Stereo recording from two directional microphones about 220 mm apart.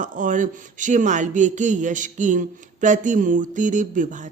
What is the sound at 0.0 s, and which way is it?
Speech, 35° right (ahead or behind).